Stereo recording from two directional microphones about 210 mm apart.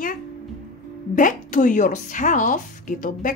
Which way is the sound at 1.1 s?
40° left (ahead or behind).